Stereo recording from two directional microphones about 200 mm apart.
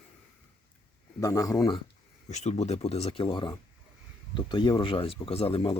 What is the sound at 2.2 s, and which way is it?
Speech, 35° left (ahead or behind).